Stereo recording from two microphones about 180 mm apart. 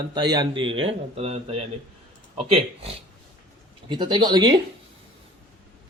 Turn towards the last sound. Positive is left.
turn(degrees=-25)  # may be behind; listen again after turning